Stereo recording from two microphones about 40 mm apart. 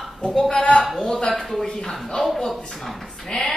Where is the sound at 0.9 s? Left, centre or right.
Centre.